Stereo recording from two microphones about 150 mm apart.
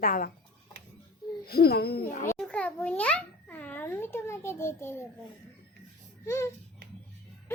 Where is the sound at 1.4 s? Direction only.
90° left.